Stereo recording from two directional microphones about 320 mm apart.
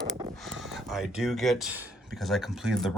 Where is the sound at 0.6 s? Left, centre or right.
Centre.